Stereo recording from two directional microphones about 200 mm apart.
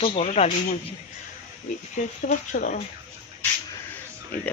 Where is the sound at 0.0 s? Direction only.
30° left (ahead or behind).